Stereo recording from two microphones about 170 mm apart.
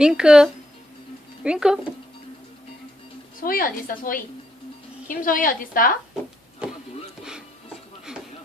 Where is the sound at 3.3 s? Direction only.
55° left (ahead or behind).